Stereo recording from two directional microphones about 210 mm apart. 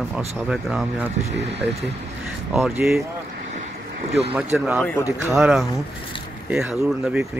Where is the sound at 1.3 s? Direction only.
55° right (ahead or behind).